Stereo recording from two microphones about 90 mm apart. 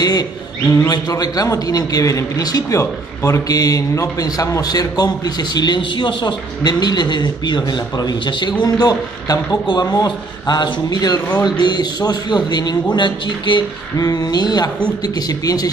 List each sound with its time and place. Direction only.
0.7 s a man's voice: 35° left (ahead or behind)
0.9 s a man's voice: 50° left (ahead or behind)
5.8 s a man's voice: 65° left (ahead or behind)
8.6 s a man's voice: 45° left (ahead or behind); by 13.7 s 60° left (ahead or behind)
13.9 s a man's voice: 45° left (ahead or behind)